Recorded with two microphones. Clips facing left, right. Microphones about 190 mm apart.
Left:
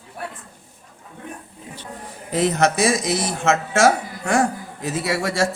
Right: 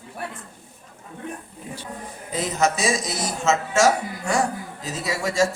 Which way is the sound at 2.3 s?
65° left (ahead or behind).